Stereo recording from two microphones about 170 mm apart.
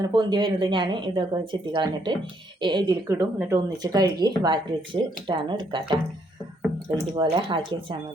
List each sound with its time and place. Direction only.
0.0 s speech: 25° right (ahead or behind)
3.2 s speech: 15° right (ahead or behind)
7.2 s speech: 30° right (ahead or behind)